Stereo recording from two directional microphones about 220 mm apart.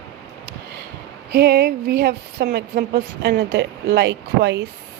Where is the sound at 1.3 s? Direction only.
45° right (ahead or behind).